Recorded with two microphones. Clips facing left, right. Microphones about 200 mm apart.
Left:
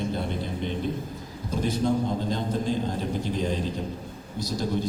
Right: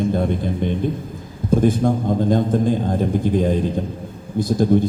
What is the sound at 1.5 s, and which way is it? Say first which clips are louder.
A man's voice: right 8 dB; 50° right (ahead or behind).